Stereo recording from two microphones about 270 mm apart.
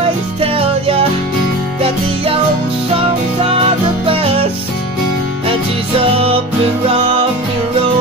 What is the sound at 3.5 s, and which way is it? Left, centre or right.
Music, centre.